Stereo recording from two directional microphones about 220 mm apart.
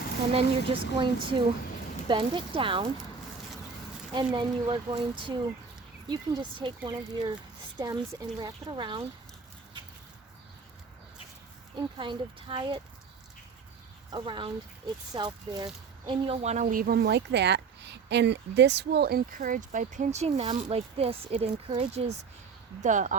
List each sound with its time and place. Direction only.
0.3 s speech: 25° right (ahead or behind)
4.1 s speech: 20° right (ahead or behind)
11.9 s speech: 20° right (ahead or behind)
14.1 s speech: 20° right (ahead or behind)